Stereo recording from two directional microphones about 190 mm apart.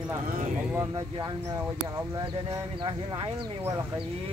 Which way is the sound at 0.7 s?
20° right (ahead or behind).